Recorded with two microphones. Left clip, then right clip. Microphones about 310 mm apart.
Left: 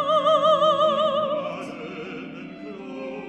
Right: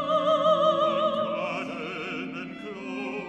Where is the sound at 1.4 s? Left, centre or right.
Centre.